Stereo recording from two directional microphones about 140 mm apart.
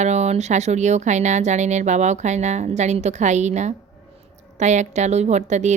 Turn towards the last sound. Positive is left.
turn(degrees=-55)  # may be behind; listen again after turning